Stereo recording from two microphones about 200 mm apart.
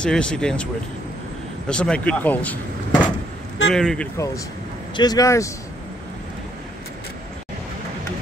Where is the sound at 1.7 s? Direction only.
5° left (ahead or behind).